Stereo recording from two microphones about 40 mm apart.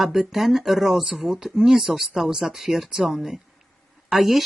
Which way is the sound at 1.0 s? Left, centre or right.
Right.